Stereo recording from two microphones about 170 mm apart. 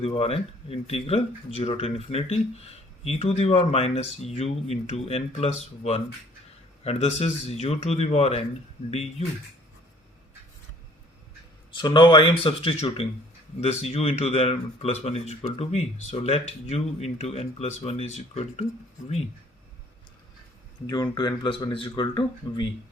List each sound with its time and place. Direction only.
0.0 s speech: 35° left (ahead or behind)
6.8 s speech: 35° left (ahead or behind)
11.7 s speech: 25° left (ahead or behind)
20.8 s speech: 25° left (ahead or behind)